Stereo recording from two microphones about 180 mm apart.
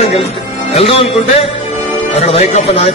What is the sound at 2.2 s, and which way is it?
Speech, 35° left (ahead or behind).